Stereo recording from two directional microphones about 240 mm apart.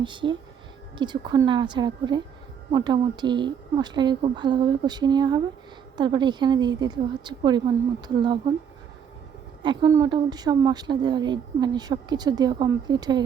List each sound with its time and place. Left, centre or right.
0.0 s a woman's voice: centre
9.6 s speech: centre